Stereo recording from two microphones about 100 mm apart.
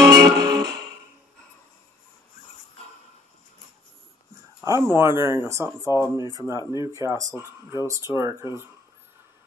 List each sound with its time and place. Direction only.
0.0 s music: 35° right (ahead or behind)
4.6 s speech: 25° right (ahead or behind)